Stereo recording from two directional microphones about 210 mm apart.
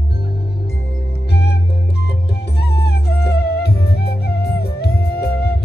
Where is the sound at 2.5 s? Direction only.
50° left (ahead or behind).